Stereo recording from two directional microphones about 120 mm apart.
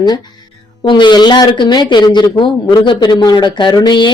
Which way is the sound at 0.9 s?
40° left (ahead or behind).